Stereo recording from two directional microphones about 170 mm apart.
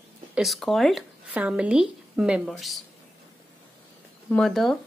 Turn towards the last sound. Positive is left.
turn(degrees=0)  # may be behind; listen again after turning